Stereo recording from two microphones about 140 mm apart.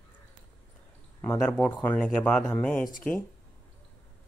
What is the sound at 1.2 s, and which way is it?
Speech, 15° left (ahead or behind).